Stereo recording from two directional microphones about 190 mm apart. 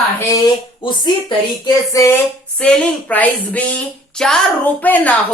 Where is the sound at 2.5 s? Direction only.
5° left (ahead or behind).